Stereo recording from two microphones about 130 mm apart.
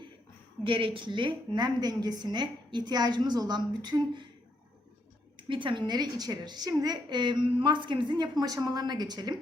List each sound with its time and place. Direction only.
0.6 s a woman's voice: 40° right (ahead or behind)
5.4 s a woman's voice: 40° right (ahead or behind)